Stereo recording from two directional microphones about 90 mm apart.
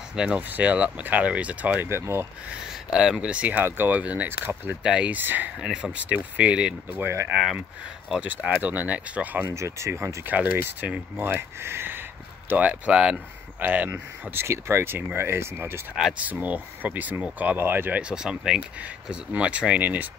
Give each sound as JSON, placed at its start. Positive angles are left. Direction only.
{"t": 0.1, "sound": "speech", "side_deg": -10}
{"t": 1.9, "sound": "speech", "side_deg": -30}
{"t": 2.7, "sound": "speech", "side_deg": -5}
{"t": 7.0, "sound": "speech", "side_deg": -30}
{"t": 8.1, "sound": "speech", "side_deg": -10}
{"t": 9.8, "sound": "speech", "side_deg": -30}
{"t": 10.3, "sound": "speech", "side_deg": -15}
{"t": 15.9, "sound": "speech", "side_deg": -5}
{"t": 16.2, "sound": "speech", "side_deg": -15}
{"t": 18.0, "sound": "speech", "side_deg": -10}